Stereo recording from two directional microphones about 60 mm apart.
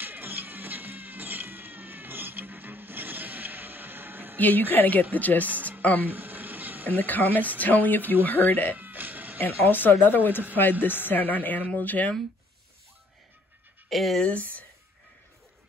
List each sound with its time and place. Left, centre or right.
0.0 s cat: right
4.4 s speech: left
5.5 s music: right
5.8 s a sound: left
6.0 s a sound: right
7.0 s speech: left
8.7 s music: right
9.4 s speech: left
13.8 s speech: centre
14.2 s speech: left